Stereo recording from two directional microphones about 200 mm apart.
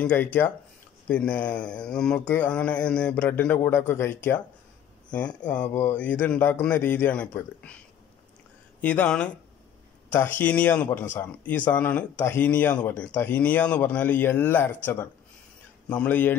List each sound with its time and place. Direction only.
0.0 s speech: 10° left (ahead or behind)
8.8 s speech: 5° left (ahead or behind)
10.4 s speech: 5° left (ahead or behind)
15.9 s speech: 5° left (ahead or behind)